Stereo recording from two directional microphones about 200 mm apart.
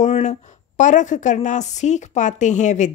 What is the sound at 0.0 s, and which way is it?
A woman's voice, 35° left (ahead or behind).